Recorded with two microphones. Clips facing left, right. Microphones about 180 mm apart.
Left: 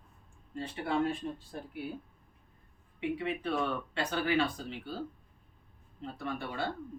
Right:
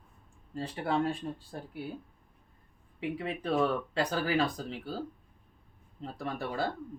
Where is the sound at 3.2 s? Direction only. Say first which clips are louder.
Right 6 dB; 35° right (ahead or behind).